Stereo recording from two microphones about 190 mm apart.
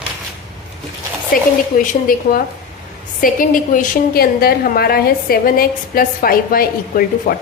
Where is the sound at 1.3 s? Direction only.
50° left (ahead or behind).